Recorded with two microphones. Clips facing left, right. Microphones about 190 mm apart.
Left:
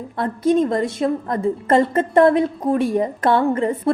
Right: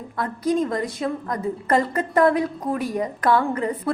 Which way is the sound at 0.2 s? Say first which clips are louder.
Left 5 dB; 25° left (ahead or behind).